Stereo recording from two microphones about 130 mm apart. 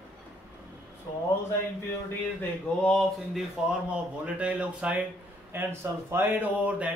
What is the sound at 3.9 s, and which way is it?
Speech, 10° right (ahead or behind).